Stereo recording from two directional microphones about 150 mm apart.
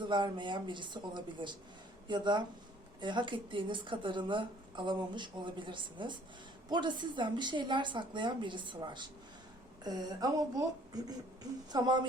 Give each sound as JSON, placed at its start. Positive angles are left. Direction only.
{"t": 0.0, "sound": "a woman's voice", "side_deg": -30}